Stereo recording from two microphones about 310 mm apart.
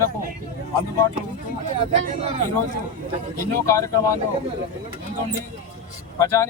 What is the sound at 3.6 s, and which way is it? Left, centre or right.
Speech, centre.